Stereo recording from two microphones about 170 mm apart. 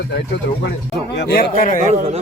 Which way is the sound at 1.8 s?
40° right (ahead or behind).